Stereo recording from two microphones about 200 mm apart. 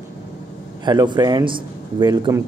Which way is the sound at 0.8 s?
20° right (ahead or behind).